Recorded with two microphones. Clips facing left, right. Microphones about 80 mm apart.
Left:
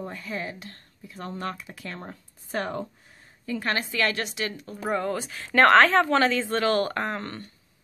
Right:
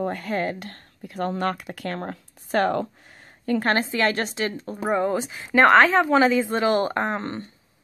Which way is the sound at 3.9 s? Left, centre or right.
Right.